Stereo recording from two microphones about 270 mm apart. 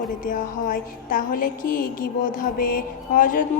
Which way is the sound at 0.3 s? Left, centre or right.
Left.